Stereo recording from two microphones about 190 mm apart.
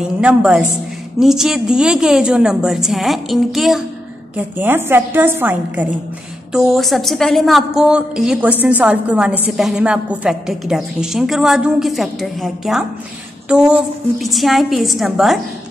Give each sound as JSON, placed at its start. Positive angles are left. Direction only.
{"t": 0.0, "sound": "a woman's voice", "side_deg": -5}